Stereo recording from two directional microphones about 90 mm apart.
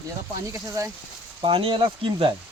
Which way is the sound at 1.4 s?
80° right.